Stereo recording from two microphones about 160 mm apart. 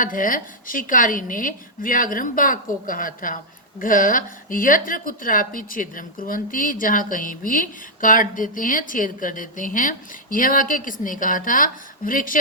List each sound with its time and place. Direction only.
0.0 s a woman's voice: 60° left (ahead or behind)